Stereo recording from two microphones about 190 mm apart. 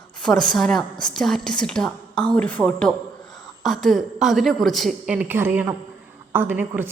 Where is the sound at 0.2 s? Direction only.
5° left (ahead or behind).